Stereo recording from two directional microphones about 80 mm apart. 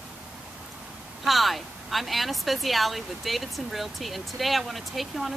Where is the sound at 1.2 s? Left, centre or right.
Centre.